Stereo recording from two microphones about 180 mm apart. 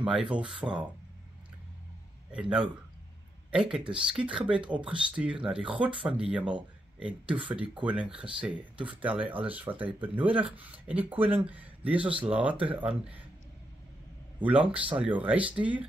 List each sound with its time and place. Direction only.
0.0 s speech: 5° right (ahead or behind)
3.7 s speech: 5° right (ahead or behind)
7.3 s speech: 30° right (ahead or behind)
7.8 s speech: 5° right (ahead or behind)
14.4 s speech: 10° right (ahead or behind)